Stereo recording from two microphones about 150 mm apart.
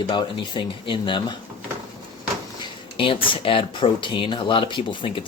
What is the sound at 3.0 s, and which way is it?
Speech, 35° left (ahead or behind).